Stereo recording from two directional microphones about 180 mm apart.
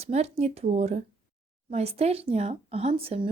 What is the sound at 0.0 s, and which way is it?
Speech, 35° right (ahead or behind).